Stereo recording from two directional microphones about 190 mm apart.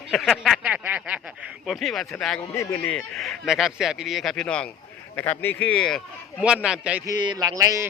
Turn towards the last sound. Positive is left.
turn(degrees=-15)  # may be behind; listen again after turning